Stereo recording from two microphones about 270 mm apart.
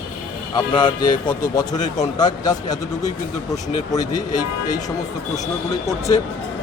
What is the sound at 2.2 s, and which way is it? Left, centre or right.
Speech, centre.